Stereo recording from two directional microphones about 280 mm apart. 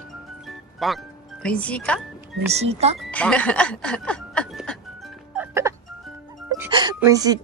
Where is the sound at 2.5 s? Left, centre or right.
Right.